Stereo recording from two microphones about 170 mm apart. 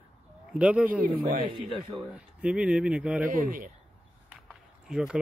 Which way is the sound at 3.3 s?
55° right (ahead or behind).